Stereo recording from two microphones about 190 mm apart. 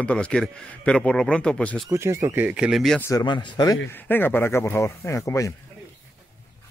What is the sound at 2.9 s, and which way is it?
Speech, 15° left (ahead or behind).